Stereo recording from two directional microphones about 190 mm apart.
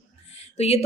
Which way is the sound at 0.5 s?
35° left (ahead or behind).